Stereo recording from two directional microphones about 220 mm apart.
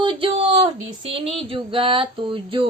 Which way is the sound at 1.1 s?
25° right (ahead or behind).